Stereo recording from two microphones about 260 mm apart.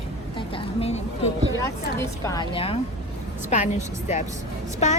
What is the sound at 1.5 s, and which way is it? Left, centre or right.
A woman's voice, centre.